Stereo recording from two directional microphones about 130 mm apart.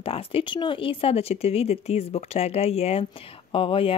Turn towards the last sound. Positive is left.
turn(degrees=45)  # may be behind; listen again after turning